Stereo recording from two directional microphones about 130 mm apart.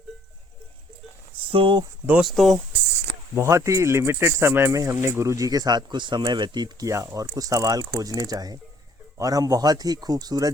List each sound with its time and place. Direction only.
1.5 s speech: 40° right (ahead or behind)
2.0 s speech: 10° right (ahead or behind)
3.3 s speech: 20° right (ahead or behind)